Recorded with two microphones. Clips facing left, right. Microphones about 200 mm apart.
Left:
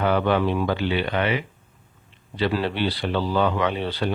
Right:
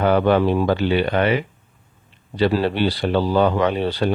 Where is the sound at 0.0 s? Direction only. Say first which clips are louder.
Right 4 dB; 45° right (ahead or behind).